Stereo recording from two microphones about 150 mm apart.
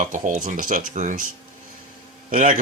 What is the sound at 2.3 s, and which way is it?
Speech, 60° right (ahead or behind).